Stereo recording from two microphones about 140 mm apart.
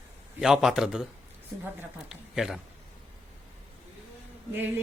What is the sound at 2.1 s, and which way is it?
Speech, 5° right (ahead or behind).